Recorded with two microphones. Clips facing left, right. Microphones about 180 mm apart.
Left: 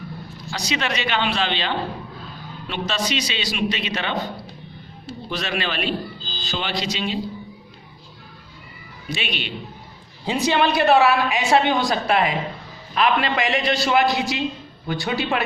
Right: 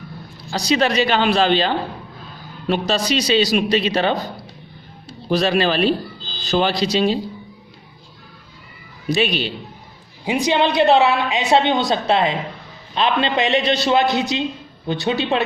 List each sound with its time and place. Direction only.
0.5 s a man's voice: 35° right (ahead or behind)
5.3 s a man's voice: 35° right (ahead or behind)
9.0 s a man's voice: 40° right (ahead or behind)
10.2 s a woman's voice: 15° right (ahead or behind)